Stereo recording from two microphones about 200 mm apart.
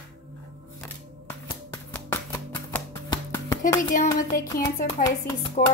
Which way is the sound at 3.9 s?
40° left (ahead or behind).